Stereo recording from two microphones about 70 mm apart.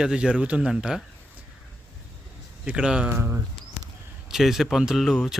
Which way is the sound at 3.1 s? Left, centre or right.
Right.